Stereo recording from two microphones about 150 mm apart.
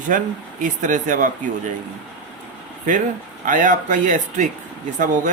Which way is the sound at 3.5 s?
60° right (ahead or behind).